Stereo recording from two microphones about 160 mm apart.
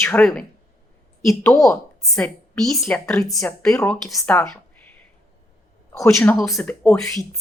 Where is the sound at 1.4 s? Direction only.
20° left (ahead or behind).